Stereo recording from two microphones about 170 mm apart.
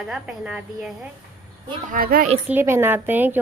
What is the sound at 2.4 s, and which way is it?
Speech, 10° right (ahead or behind).